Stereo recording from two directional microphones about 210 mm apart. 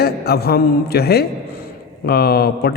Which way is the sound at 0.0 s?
50° left (ahead or behind).